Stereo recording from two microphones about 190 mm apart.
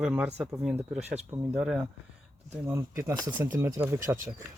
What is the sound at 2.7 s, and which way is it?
Speech, 15° right (ahead or behind).